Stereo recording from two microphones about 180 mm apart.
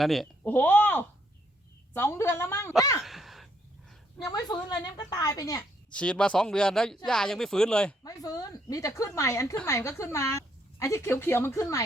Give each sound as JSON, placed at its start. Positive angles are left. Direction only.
{"t": 0.0, "sound": "speech", "side_deg": 0}
{"t": 3.0, "sound": "gasp", "side_deg": 0}
{"t": 4.3, "sound": "a woman's voice", "side_deg": 20}
{"t": 5.9, "sound": "speech", "side_deg": 5}
{"t": 8.0, "sound": "speech", "side_deg": 20}